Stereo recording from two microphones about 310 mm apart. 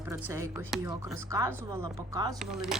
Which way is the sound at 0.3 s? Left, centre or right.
Centre.